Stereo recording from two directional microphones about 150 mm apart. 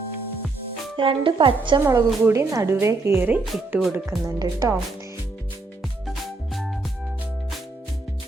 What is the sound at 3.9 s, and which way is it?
Speech, 20° right (ahead or behind).